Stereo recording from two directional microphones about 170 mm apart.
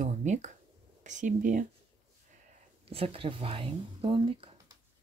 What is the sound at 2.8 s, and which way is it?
Speech, 35° right (ahead or behind).